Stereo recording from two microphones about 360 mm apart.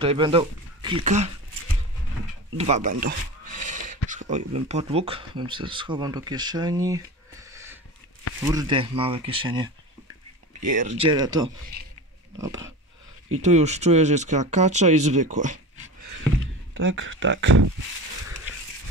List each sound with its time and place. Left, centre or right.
0.0 s speech: centre
2.5 s a sound: centre
4.6 s speech: centre
13.4 s speech: centre
16.7 s speech: right